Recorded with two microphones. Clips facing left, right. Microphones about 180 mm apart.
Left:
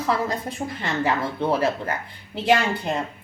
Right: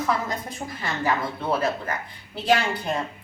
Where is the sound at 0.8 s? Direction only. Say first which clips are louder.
Left 1 dB; 25° left (ahead or behind).